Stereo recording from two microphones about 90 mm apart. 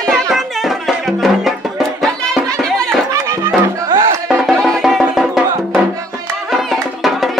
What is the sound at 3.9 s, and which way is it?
Music, 45° right (ahead or behind).